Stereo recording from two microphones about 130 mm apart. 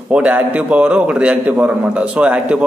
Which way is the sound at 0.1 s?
10° right (ahead or behind).